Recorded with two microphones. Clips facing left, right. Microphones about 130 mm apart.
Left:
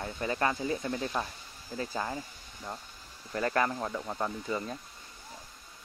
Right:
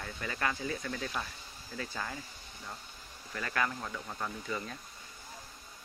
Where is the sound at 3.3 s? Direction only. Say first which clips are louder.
Left 6 dB; 35° left (ahead or behind).